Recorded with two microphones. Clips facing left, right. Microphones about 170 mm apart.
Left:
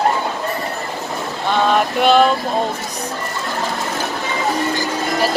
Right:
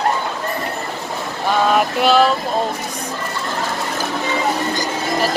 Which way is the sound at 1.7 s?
Centre (ahead or behind).